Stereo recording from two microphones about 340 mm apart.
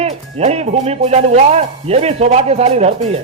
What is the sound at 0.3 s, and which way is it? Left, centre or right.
Speech, centre.